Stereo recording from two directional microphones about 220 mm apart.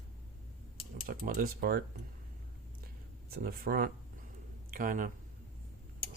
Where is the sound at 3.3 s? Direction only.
40° right (ahead or behind).